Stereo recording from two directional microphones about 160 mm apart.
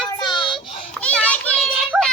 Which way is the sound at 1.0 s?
10° left (ahead or behind).